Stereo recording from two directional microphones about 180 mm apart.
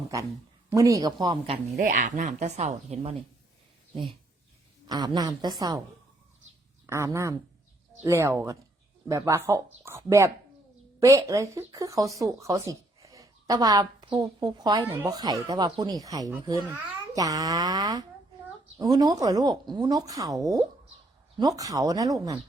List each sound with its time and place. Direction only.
0.7 s speech: 15° right (ahead or behind)
1.7 s speech: 45° right (ahead or behind)
4.9 s speech: 20° right (ahead or behind)
6.8 s speech: 15° right (ahead or behind)